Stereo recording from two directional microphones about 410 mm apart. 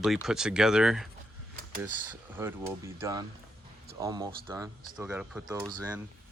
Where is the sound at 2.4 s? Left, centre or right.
Centre.